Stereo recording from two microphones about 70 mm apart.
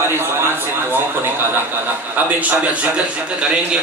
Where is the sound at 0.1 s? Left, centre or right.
Right.